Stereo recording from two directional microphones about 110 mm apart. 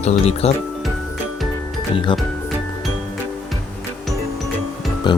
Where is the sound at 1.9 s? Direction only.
50° left (ahead or behind).